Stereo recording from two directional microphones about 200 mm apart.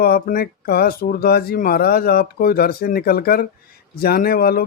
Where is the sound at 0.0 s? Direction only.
50° left (ahead or behind).